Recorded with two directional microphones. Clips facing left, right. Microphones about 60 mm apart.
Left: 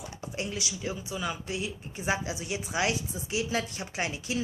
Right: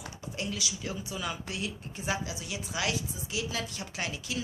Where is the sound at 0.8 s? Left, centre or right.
Centre.